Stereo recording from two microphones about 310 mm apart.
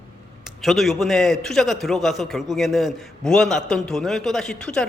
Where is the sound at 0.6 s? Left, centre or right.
Centre.